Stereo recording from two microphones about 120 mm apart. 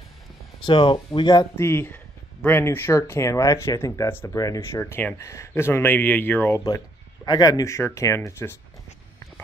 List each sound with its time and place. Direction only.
0.7 s speech: 45° left (ahead or behind)
1.6 s speech: 20° left (ahead or behind)
7.2 s speech: 35° left (ahead or behind)